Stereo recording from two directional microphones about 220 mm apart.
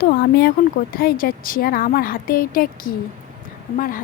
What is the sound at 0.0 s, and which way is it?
A woman's voice, 45° left (ahead or behind).